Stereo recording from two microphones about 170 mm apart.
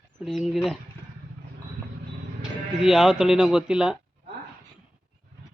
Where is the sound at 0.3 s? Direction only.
Centre (ahead or behind).